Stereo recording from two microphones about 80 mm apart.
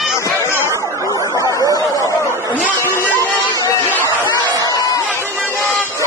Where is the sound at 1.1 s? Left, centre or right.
Left.